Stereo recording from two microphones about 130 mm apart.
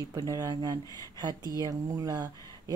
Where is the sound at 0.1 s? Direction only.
25° right (ahead or behind).